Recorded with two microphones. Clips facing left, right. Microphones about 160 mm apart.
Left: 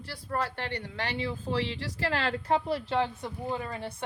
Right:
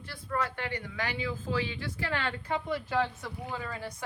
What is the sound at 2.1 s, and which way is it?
Speech, 35° left (ahead or behind).